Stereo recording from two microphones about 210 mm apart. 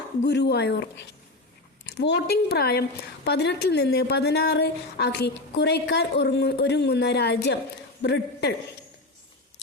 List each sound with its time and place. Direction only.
0.3 s a woman's voice: 50° left (ahead or behind)